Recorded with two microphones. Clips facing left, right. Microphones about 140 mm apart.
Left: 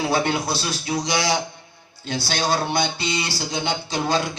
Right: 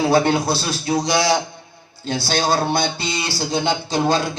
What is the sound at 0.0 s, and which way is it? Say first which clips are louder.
Speech: right 5 dB; 35° right (ahead or behind).